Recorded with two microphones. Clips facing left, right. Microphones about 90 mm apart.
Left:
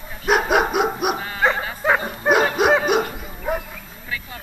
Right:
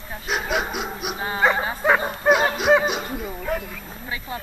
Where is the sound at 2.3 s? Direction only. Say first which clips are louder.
Left 1 dB; 50° left (ahead or behind).